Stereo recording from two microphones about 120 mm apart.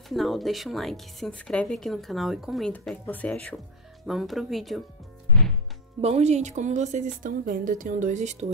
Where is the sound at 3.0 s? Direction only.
10° left (ahead or behind).